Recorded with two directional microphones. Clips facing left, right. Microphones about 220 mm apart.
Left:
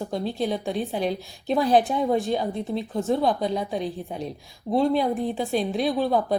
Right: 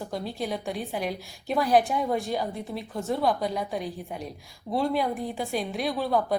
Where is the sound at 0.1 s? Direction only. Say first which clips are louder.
Left 5 dB; 25° left (ahead or behind).